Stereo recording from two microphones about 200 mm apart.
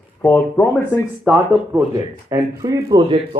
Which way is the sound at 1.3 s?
10° right (ahead or behind).